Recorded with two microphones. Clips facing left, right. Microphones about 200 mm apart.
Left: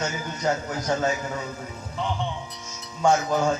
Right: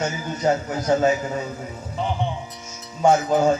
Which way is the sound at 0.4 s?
25° right (ahead or behind).